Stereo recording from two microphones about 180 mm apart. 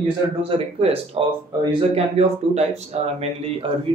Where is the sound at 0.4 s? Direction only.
35° right (ahead or behind).